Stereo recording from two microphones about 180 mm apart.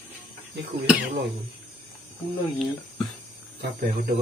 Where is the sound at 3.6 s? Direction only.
50° right (ahead or behind).